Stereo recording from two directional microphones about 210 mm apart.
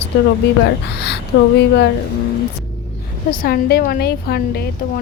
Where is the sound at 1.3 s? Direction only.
70° left (ahead or behind).